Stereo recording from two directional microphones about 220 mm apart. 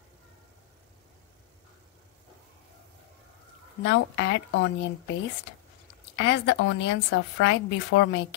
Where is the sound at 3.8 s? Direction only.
50° left (ahead or behind).